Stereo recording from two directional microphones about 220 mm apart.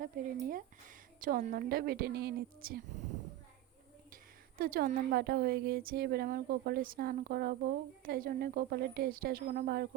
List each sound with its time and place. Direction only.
0.0 s a woman's voice: 40° right (ahead or behind)
4.1 s a woman's voice: 40° right (ahead or behind)